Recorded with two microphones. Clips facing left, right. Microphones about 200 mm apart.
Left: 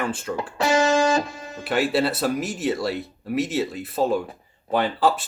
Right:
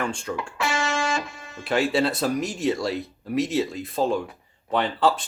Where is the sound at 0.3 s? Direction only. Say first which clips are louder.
Left 11 dB; 35° left (ahead or behind).